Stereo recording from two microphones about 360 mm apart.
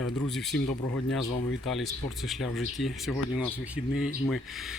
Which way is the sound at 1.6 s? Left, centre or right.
Centre.